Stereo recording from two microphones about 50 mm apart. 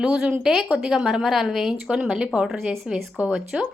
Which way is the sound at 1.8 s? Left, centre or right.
Centre.